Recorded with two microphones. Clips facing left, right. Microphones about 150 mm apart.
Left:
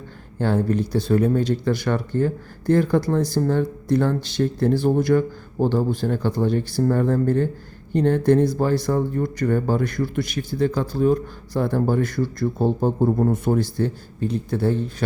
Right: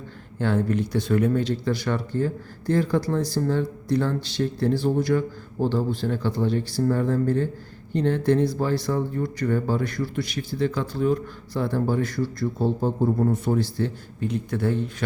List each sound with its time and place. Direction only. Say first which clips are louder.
0.3 s speech: left 2 dB; 35° left (ahead or behind)